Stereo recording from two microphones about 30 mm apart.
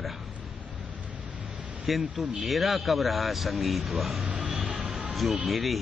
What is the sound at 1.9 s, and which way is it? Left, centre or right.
Speech, centre.